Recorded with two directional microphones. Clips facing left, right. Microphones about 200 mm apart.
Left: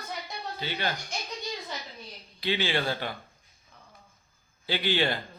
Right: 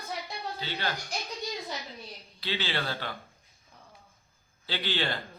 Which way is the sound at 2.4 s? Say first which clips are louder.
Left 5 dB; 15° left (ahead or behind).